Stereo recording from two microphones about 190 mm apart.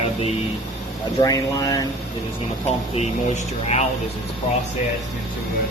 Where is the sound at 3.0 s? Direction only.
35° left (ahead or behind).